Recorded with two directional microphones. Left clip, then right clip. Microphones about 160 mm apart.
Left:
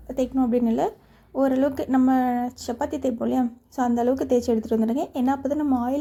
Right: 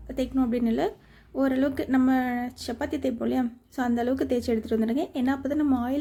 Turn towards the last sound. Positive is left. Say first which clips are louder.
# left 2 dB
turn(degrees=0)  # may be behind; listen again after turning